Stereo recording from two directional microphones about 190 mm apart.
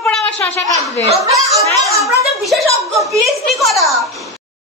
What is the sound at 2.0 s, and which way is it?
Speech, centre (ahead or behind).